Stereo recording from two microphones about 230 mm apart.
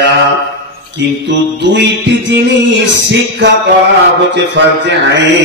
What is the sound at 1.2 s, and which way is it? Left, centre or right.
Music, right.